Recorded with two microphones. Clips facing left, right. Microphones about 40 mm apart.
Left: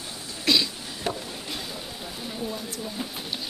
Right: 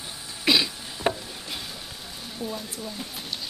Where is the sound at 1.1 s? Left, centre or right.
Centre.